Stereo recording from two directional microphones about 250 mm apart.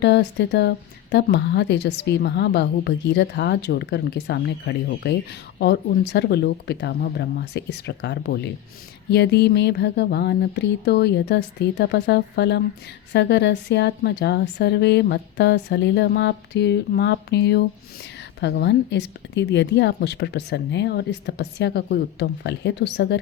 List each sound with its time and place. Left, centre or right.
0.0 s speech: left